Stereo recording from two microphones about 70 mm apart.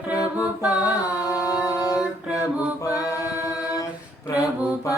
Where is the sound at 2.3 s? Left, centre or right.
Left.